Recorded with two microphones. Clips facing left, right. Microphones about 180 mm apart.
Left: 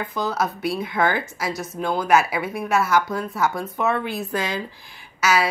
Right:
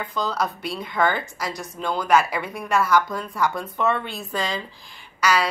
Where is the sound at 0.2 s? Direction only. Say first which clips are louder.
Left 2 dB; 5° left (ahead or behind).